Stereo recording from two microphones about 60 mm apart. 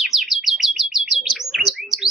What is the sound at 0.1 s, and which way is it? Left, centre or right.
Bird, centre.